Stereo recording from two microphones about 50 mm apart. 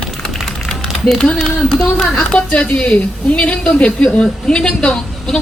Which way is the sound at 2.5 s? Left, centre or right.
Left.